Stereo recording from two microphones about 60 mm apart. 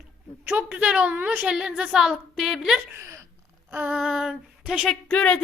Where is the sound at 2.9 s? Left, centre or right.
Right.